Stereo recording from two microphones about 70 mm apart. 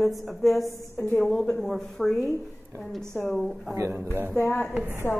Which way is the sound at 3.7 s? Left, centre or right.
Right.